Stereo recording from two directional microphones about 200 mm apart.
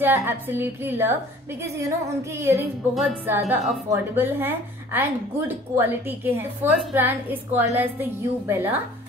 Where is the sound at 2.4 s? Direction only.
15° right (ahead or behind).